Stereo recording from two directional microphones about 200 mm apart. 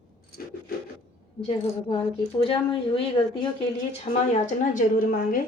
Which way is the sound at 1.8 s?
30° left (ahead or behind).